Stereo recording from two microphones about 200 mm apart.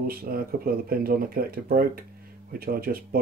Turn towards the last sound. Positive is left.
turn(degrees=-50)  # may be behind; listen again after turning